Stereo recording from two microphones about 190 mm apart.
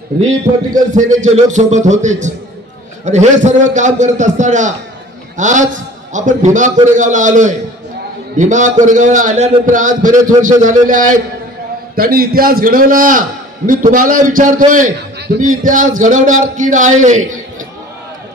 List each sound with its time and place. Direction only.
0.9 s a man's voice: 40° right (ahead or behind)